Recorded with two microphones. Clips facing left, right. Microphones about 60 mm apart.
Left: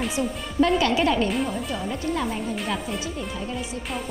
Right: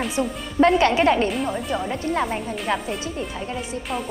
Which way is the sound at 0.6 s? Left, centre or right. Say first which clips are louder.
Right 5 dB; right.